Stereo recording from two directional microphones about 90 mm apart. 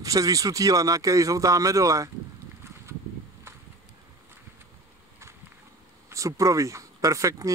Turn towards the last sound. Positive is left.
turn(degrees=-35)  # may be behind; listen again after turning